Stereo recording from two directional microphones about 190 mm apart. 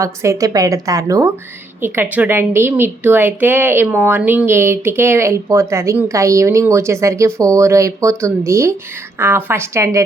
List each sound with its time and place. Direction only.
0.0 s a woman's voice: 15° right (ahead or behind)